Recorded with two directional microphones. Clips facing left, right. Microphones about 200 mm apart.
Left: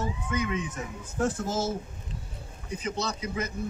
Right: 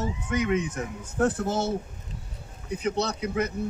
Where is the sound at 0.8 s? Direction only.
60° right (ahead or behind).